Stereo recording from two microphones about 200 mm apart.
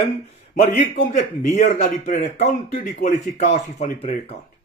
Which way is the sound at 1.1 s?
35° left (ahead or behind).